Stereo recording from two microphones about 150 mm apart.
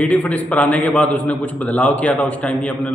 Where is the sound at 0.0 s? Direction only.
10° left (ahead or behind).